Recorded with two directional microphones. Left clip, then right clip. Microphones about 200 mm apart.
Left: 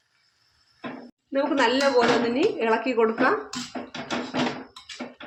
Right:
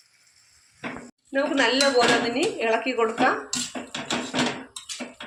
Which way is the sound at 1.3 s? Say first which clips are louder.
Even; 55° left (ahead or behind).